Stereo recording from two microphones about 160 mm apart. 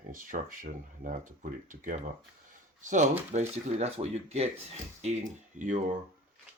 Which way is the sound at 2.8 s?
50° right (ahead or behind).